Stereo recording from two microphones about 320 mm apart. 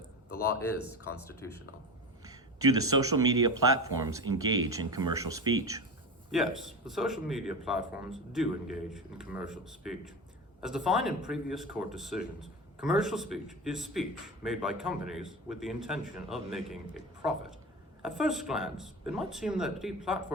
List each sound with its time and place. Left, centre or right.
2.2 s a sound: centre
3.0 s speech: centre
18.2 s speech: centre